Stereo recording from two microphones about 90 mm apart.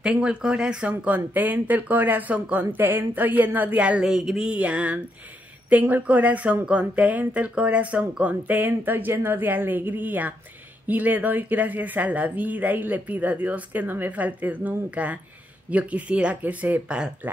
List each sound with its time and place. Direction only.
0.0 s speech: 10° right (ahead or behind)